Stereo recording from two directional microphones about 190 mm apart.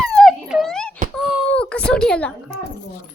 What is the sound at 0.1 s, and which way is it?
Wail, centre (ahead or behind).